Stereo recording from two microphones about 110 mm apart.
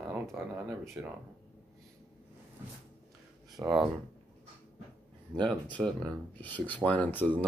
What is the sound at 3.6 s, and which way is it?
Speech, 30° right (ahead or behind).